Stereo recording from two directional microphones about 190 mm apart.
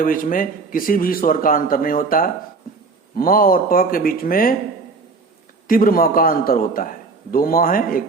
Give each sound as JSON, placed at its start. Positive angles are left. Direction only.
{"t": 0.0, "sound": "a man's voice", "side_deg": 45}
{"t": 5.6, "sound": "a man's voice", "side_deg": 50}